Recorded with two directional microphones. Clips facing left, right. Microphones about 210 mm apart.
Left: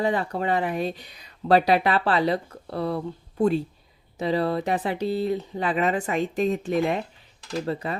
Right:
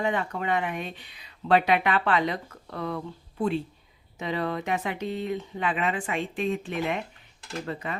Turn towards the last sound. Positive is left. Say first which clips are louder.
# left 5 dB
turn(degrees=35)  # may be behind; listen again after turning